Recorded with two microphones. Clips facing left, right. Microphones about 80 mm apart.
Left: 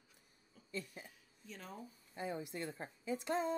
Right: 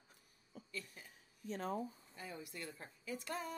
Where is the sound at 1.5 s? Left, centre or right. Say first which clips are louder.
Right 10 dB; right.